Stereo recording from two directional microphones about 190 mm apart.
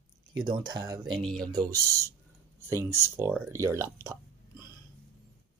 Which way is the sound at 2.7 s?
15° right (ahead or behind).